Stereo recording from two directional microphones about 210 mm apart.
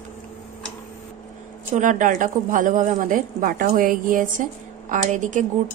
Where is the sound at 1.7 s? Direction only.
35° right (ahead or behind).